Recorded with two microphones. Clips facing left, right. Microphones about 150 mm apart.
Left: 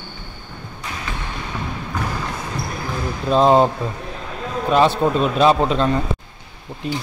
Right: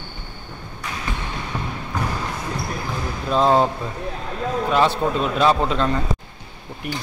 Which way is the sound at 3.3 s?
20° left (ahead or behind).